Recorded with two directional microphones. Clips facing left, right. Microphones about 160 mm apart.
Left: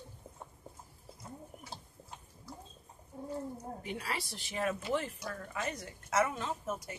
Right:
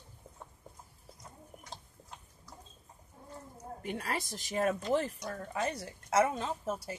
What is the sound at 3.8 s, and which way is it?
A woman's voice, 50° right (ahead or behind).